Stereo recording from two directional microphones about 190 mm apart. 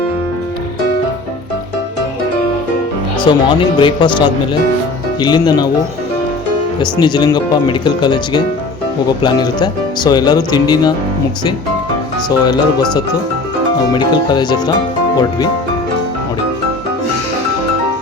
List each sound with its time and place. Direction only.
3.2 s speech: 25° left (ahead or behind)
6.7 s speech: 20° left (ahead or behind)
12.5 s speech: 20° left (ahead or behind)